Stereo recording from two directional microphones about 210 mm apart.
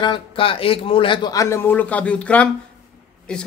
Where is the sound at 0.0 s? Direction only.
25° left (ahead or behind).